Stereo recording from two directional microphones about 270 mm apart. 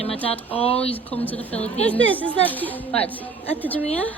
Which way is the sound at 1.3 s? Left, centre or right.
Centre.